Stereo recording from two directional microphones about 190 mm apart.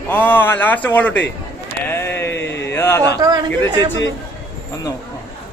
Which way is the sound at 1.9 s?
15° left (ahead or behind).